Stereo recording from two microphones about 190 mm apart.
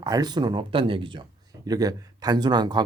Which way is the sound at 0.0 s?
20° right (ahead or behind).